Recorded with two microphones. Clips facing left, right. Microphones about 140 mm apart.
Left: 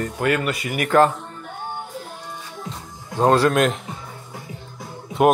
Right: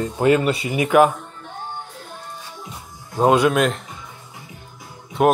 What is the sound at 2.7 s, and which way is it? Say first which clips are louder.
Music: left 4 dB; 10° right (ahead or behind).